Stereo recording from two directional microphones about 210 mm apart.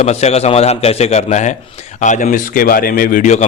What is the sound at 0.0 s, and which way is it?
A man's voice, 30° left (ahead or behind).